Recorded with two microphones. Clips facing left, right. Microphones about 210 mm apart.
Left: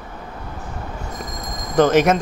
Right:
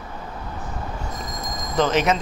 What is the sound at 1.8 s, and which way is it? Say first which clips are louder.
Speech: left 5 dB; 50° left (ahead or behind).